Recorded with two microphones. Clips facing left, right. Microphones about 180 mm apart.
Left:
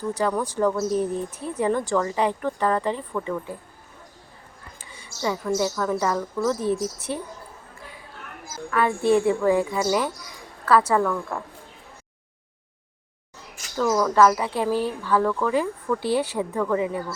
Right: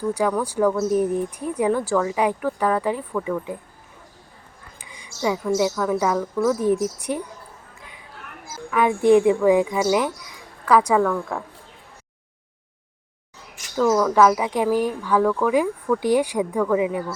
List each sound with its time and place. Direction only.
0.1 s speech: 10° right (ahead or behind)
4.8 s a woman's voice: 15° right (ahead or behind)
8.7 s speech: 15° right (ahead or behind)
14.2 s speech: 10° right (ahead or behind)